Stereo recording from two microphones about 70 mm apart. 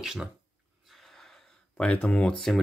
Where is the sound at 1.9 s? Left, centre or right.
Centre.